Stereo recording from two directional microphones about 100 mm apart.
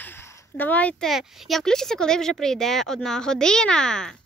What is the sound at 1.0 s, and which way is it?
Speech, centre (ahead or behind).